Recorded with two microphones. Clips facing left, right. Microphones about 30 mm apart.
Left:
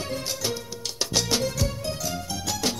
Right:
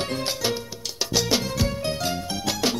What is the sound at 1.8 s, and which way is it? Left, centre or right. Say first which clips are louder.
Music: right 4 dB; right.